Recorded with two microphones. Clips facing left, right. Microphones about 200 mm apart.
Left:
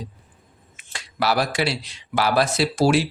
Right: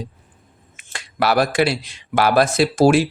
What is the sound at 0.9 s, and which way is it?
Speech, 55° right (ahead or behind).